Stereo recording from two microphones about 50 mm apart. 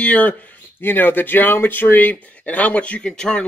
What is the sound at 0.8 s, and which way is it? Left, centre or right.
Speech, left.